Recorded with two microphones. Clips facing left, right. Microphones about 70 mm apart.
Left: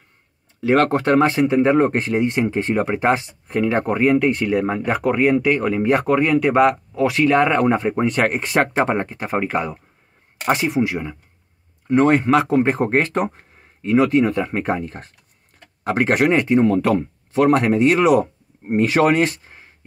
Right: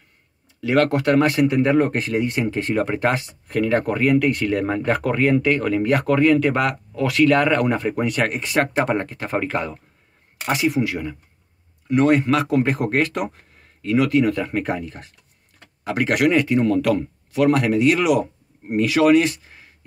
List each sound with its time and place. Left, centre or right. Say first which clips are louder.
0.6 s speech: left 2 dB; left
8.8 s speech: left 1 dB; left
10.4 s speech: left 2 dB; left